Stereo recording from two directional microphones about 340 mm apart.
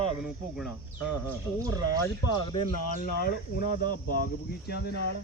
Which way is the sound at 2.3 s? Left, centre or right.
Centre.